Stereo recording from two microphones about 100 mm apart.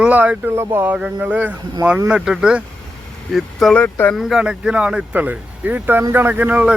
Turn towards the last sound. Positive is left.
turn(degrees=-15)  # may be behind; listen again after turning